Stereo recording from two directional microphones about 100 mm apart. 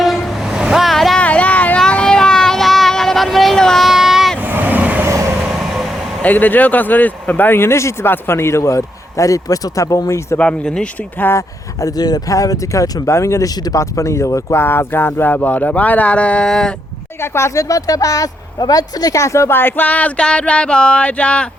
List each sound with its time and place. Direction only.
0.0 s vehicle: centre (ahead or behind)
1.2 s a sound: 15° left (ahead or behind); by 4.4 s 5° right (ahead or behind)
4.4 s vehicle: 20° right (ahead or behind)
5.5 s vehicle: centre (ahead or behind)
6.2 s speech: 15° left (ahead or behind)
10.3 s speech: 10° left (ahead or behind)
11.3 s speech: 30° left (ahead or behind); by 16.7 s 5° left (ahead or behind)
17.2 s speech: 25° left (ahead or behind); by 21.4 s 10° left (ahead or behind)